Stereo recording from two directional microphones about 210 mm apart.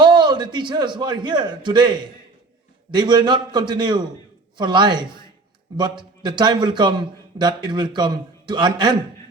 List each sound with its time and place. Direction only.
0.0 s a man's voice: 20° right (ahead or behind)